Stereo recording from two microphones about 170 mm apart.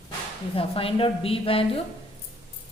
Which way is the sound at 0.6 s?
35° left (ahead or behind).